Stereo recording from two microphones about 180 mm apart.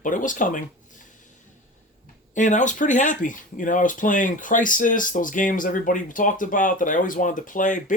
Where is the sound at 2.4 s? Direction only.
45° left (ahead or behind).